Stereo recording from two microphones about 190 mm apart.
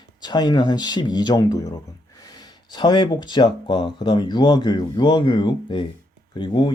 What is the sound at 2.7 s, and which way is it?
Speech, 25° left (ahead or behind).